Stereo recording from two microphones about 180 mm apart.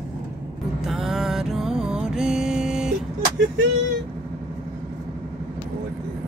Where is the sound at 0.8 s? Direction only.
Centre (ahead or behind).